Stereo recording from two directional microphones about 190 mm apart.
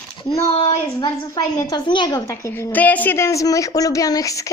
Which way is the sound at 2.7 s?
10° left (ahead or behind).